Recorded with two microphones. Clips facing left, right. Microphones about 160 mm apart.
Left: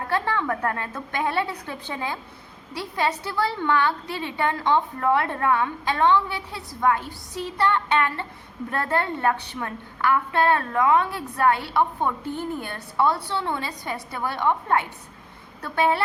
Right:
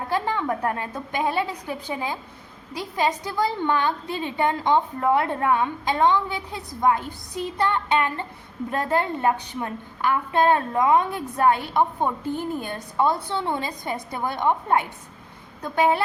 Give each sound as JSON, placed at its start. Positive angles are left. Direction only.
{"t": 0.1, "sound": "a woman's voice", "side_deg": -15}